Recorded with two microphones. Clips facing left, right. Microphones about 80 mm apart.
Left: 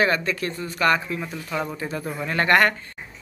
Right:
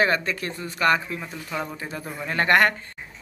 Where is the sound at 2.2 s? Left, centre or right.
Centre.